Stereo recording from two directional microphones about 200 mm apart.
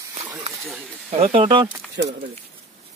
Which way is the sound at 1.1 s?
30° right (ahead or behind).